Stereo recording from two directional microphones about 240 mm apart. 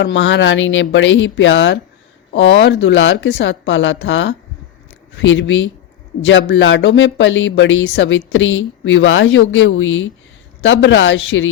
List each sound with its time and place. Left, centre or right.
0.0 s speech: left